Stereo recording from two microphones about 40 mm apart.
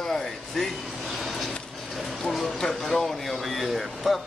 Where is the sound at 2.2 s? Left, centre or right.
Centre.